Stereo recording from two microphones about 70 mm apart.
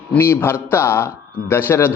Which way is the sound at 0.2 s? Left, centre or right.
Left.